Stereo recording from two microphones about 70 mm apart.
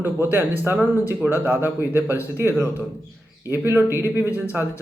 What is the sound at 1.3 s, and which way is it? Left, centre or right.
Speech, right.